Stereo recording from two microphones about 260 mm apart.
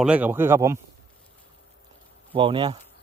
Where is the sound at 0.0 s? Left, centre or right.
Centre.